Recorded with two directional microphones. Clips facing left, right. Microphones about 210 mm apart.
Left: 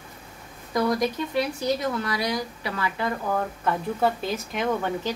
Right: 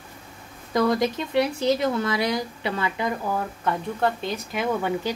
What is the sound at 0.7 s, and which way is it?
Speech, 25° right (ahead or behind).